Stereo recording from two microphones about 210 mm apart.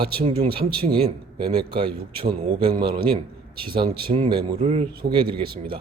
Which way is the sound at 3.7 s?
25° right (ahead or behind).